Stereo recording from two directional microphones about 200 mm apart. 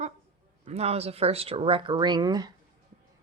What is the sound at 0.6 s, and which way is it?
Speech, 30° right (ahead or behind).